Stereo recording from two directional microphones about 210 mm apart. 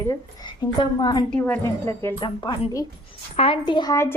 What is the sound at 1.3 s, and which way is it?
Speech, 5° left (ahead or behind).